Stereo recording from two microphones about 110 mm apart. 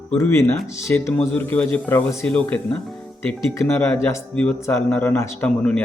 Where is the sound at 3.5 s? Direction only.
20° left (ahead or behind).